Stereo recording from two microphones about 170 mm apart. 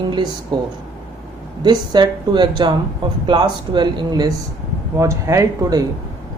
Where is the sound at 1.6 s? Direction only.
25° right (ahead or behind).